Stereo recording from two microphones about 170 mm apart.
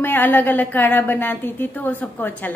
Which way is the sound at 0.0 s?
10° left (ahead or behind).